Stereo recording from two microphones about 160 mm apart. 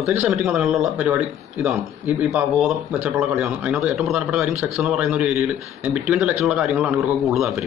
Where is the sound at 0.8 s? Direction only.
15° right (ahead or behind).